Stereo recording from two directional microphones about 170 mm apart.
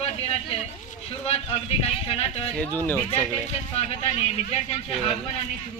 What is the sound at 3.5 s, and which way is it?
A man's voice, 40° left (ahead or behind).